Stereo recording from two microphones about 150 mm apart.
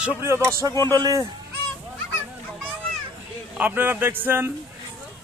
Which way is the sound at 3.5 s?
10° right (ahead or behind).